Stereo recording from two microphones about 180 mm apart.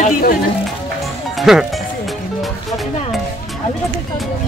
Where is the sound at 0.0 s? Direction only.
55° left (ahead or behind).